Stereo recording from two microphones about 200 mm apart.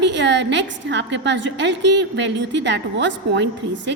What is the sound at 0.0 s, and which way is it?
A woman's voice, 60° right (ahead or behind).